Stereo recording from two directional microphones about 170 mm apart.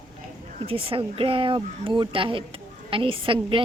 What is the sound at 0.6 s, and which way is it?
Speech, 35° right (ahead or behind).